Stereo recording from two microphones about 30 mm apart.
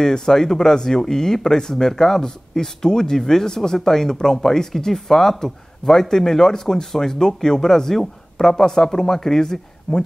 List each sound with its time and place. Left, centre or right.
0.0 s speech: centre